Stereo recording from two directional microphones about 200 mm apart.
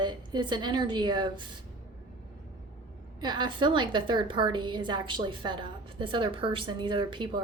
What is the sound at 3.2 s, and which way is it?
A woman's voice, 20° right (ahead or behind).